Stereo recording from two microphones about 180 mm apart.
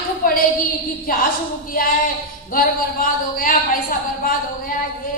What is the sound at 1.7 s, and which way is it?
Speech, 50° left (ahead or behind).